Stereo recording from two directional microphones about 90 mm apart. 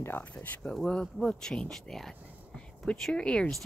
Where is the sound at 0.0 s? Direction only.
20° left (ahead or behind).